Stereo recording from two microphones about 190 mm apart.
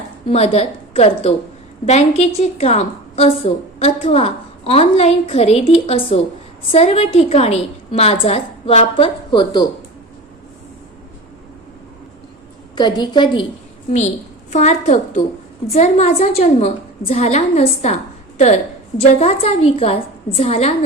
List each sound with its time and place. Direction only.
0.3 s a woman's voice: 35° left (ahead or behind)
12.7 s a woman's voice: 25° left (ahead or behind)
14.5 s a woman's voice: 35° left (ahead or behind)